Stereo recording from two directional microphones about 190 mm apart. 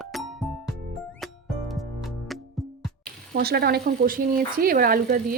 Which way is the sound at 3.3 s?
55° right (ahead or behind).